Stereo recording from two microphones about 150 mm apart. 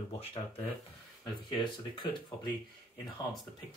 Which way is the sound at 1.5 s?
30° left (ahead or behind).